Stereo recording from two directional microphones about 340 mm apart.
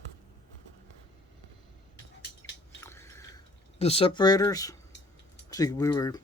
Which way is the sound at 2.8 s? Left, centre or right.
Centre.